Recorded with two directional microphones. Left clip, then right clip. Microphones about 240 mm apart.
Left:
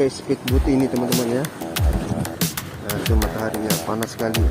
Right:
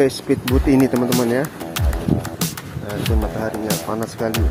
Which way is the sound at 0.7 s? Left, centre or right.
Right.